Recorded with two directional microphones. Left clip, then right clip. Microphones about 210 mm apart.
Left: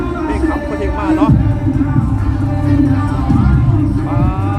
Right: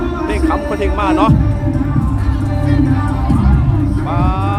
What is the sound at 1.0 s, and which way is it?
Speech, 20° right (ahead or behind).